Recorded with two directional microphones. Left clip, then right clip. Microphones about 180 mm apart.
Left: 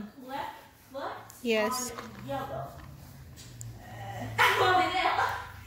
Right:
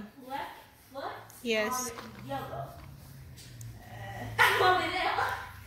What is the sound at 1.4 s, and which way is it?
Speech, 15° left (ahead or behind).